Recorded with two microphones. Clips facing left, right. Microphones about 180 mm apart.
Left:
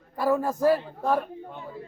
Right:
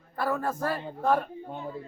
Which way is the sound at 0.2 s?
15° left (ahead or behind).